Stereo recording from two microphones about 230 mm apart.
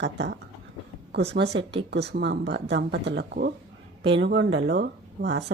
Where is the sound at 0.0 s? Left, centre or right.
Right.